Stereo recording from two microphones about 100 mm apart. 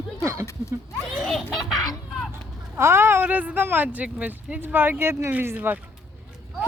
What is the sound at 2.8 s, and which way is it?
Speech, 25° right (ahead or behind).